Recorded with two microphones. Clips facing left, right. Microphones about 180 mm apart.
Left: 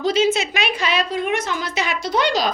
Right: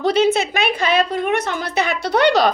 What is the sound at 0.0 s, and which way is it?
A woman's voice, 60° right (ahead or behind).